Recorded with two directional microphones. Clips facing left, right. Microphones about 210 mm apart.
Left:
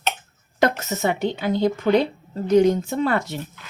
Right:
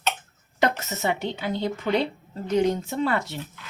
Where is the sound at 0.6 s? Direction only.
50° left (ahead or behind).